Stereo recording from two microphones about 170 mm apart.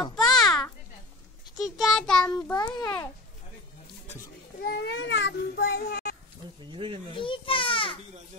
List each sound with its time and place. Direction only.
0.1 s children playing: centre (ahead or behind)
1.6 s child singing: centre (ahead or behind)
2.5 s a child's voice: 25° left (ahead or behind)
4.6 s a child's voice: 70° left (ahead or behind)
6.6 s speech: 30° right (ahead or behind)
7.2 s a child's voice: 30° left (ahead or behind)